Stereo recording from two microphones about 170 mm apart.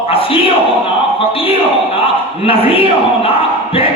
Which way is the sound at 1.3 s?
35° left (ahead or behind).